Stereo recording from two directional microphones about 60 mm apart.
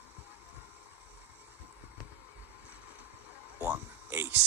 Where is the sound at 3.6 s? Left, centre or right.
Right.